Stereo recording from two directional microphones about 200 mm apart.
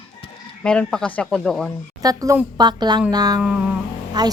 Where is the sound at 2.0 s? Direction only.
15° right (ahead or behind).